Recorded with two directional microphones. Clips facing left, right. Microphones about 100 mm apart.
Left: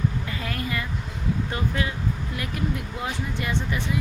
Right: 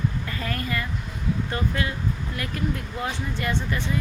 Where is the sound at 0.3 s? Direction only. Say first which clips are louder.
Right 1 dB; 15° left (ahead or behind).